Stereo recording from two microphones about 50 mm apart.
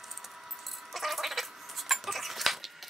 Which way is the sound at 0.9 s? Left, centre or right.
Centre.